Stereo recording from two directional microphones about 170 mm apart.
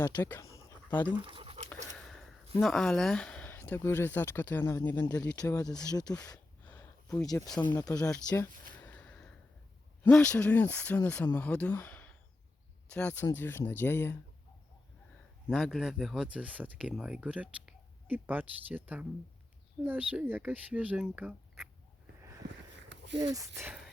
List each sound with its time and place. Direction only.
0.2 s dog: 15° left (ahead or behind)
1.2 s dog: 30° right (ahead or behind)
2.0 s a sound: 5° left (ahead or behind)
2.6 s speech: centre (ahead or behind); by 6.4 s 20° left (ahead or behind)
6.7 s a sound: 15° left (ahead or behind)
7.7 s speech: 20° left (ahead or behind)
8.1 s speech: 10° left (ahead or behind)
8.8 s gasp: 10° left (ahead or behind)
10.0 s speech: 5° left (ahead or behind)
15.4 s speech: centre (ahead or behind)
22.2 s a sound: 15° right (ahead or behind)
22.4 s a sound: 90° right
23.2 s speech: 20° right (ahead or behind)